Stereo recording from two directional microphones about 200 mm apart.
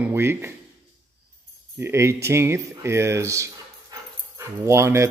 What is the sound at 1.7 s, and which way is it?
Speech, 15° right (ahead or behind).